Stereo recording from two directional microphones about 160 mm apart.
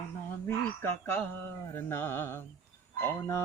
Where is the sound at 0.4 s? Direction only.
15° left (ahead or behind).